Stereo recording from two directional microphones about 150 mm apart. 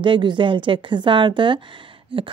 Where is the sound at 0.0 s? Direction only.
30° right (ahead or behind).